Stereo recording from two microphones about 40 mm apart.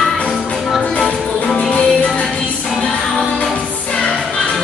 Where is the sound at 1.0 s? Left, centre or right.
Centre.